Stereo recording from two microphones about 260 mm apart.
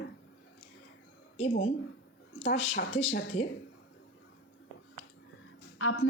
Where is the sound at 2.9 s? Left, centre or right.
Left.